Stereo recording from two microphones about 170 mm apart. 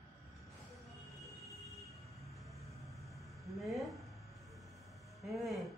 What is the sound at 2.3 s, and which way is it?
Train, centre (ahead or behind).